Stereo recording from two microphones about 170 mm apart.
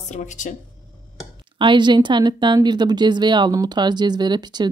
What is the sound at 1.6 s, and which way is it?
A woman's voice, 30° right (ahead or behind).